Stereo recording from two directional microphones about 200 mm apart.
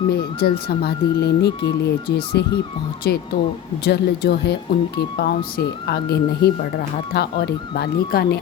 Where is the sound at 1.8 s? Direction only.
55° left (ahead or behind).